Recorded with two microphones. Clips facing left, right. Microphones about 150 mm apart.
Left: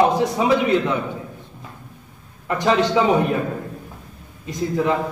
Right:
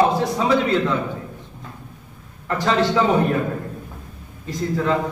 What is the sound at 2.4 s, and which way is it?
Speech, 15° left (ahead or behind).